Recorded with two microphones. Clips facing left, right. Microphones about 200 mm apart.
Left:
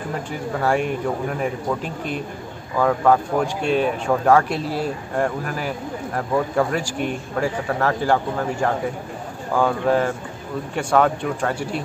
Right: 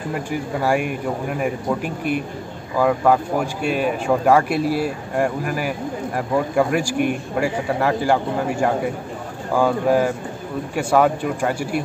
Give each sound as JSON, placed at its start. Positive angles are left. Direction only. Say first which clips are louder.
{"t": 0.3, "sound": "speech", "louder": "right 1 dB", "side_deg": -10}